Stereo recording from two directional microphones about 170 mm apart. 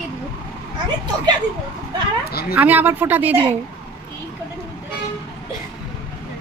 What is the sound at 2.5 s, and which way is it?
Speech, 10° right (ahead or behind).